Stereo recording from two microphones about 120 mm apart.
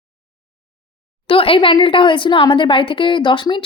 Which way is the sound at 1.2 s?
50° left (ahead or behind).